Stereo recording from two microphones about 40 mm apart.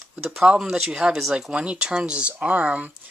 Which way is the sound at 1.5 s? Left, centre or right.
Right.